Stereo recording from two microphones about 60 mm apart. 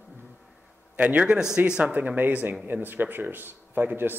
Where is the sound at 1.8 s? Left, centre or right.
Right.